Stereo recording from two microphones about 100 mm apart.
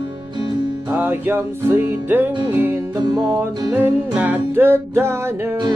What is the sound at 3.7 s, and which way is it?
Music, 15° right (ahead or behind).